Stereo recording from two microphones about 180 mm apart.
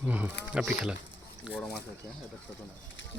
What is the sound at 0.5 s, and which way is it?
Speech, 5° right (ahead or behind).